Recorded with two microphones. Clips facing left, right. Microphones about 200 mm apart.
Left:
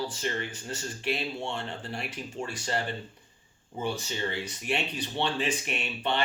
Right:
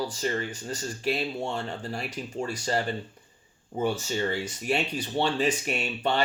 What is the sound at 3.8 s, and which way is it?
Speech, 45° right (ahead or behind).